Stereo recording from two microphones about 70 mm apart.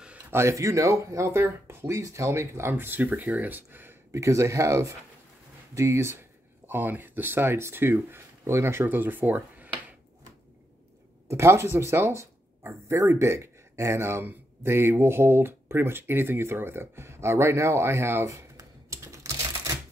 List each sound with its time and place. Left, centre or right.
0.3 s speech: right
4.1 s speech: right
6.7 s speech: right
11.2 s speech: right
18.9 s typing: right